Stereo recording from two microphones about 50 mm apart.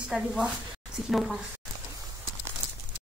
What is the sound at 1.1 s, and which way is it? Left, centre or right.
Speech, centre.